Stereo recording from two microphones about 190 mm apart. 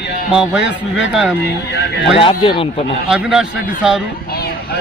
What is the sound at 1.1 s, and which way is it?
Speech, 5° right (ahead or behind).